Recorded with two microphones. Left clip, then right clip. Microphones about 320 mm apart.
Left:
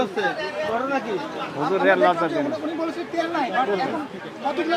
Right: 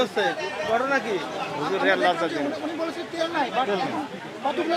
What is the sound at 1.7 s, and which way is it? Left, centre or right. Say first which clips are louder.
Speech: left 4 dB; centre.